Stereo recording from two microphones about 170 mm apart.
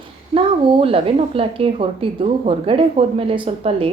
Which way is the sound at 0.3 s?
35° right (ahead or behind).